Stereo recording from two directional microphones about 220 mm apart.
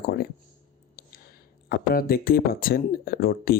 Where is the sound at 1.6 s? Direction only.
40° left (ahead or behind).